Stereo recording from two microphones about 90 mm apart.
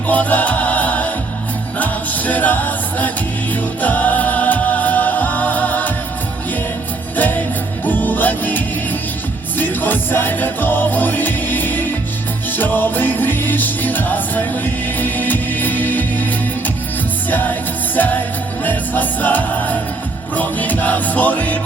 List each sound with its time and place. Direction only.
0.1 s music: 20° left (ahead or behind)
7.9 s music: 20° left (ahead or behind)